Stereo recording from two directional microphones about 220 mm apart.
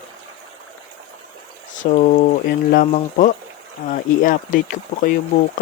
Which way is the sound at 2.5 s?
35° left (ahead or behind).